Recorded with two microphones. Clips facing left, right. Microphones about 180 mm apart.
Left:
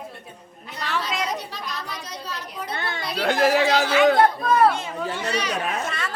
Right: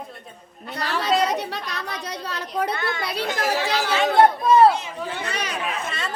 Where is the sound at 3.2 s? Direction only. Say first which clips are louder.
Left 7 dB; 65° left (ahead or behind).